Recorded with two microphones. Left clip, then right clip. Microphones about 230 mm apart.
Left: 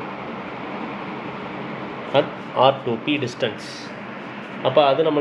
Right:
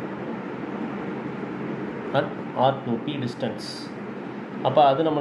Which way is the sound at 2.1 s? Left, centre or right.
Left.